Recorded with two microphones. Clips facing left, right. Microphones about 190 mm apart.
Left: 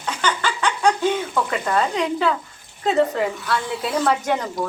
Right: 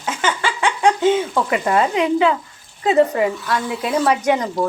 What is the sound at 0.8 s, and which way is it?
A woman's voice, 20° right (ahead or behind).